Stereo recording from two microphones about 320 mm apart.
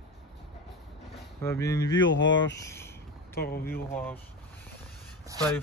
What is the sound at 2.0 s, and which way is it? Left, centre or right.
Speech, left.